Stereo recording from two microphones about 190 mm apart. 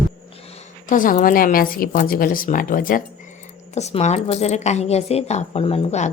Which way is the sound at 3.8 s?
35° left (ahead or behind).